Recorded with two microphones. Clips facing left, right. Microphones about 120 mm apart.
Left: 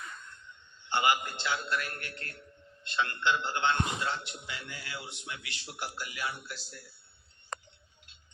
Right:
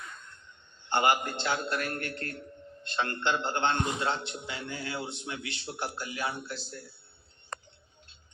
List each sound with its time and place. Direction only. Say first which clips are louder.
0.9 s a man's voice: right 2 dB; 50° right (ahead or behind); by 6.7 s 30° right (ahead or behind)